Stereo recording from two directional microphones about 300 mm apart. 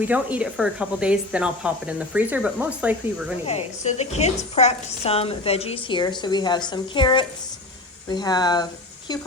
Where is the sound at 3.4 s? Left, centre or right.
Left.